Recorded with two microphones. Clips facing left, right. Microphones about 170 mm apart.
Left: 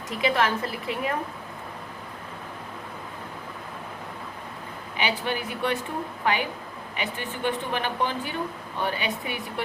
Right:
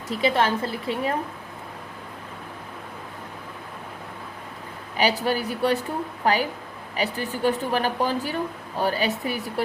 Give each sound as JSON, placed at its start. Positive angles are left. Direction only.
{"t": 0.1, "sound": "speech", "side_deg": -30}
{"t": 4.9, "sound": "speech", "side_deg": -40}